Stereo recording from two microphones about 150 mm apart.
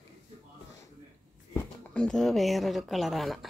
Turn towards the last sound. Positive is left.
turn(degrees=0)  # may be behind; listen again after turning